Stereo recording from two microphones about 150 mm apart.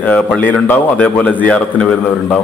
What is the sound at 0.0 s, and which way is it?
A man's voice, 10° left (ahead or behind).